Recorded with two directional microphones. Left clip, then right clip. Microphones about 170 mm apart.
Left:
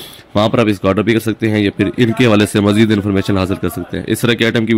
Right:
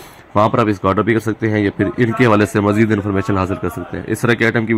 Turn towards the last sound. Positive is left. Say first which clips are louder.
# left 1 dB
turn(degrees=40)  # may be behind; listen again after turning